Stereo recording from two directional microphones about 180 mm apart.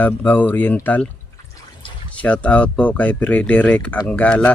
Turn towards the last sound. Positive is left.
turn(degrees=10)  # may be behind; listen again after turning